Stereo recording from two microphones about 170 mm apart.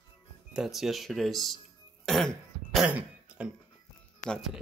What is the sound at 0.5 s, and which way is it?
Speech, centre (ahead or behind).